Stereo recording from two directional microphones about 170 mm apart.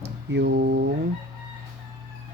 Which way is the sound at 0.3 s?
90° right.